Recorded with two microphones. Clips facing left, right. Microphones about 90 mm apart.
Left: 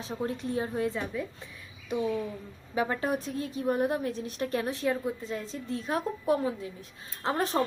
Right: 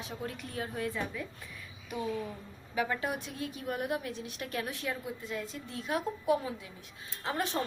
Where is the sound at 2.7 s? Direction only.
35° left (ahead or behind).